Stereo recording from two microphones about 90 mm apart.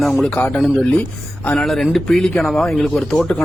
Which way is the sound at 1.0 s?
15° left (ahead or behind).